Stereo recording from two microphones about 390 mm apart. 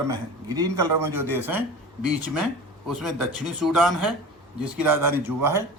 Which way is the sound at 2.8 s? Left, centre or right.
Centre.